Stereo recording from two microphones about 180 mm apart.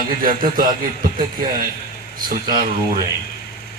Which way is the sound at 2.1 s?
50° right (ahead or behind).